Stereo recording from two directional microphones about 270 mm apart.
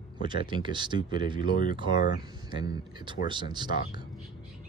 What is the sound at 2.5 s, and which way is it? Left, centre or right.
Speech, centre.